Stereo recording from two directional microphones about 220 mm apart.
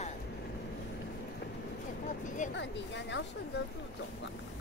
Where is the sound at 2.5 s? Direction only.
55° left (ahead or behind).